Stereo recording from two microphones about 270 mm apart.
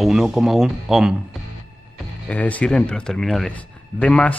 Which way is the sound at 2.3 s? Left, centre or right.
Centre.